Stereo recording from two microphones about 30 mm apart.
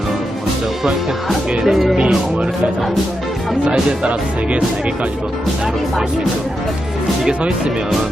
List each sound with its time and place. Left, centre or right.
1.6 s speech: centre
2.0 s speech: right
3.7 s speech: right